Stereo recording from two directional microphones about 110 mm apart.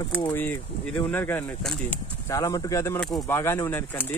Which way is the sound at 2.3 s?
30° left (ahead or behind).